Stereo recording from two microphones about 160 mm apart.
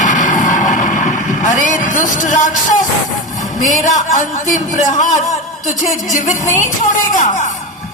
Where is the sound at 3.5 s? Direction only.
50° left (ahead or behind).